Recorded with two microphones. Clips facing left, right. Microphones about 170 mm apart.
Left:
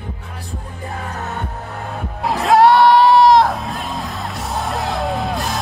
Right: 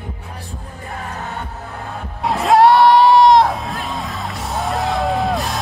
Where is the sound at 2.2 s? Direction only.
Centre (ahead or behind).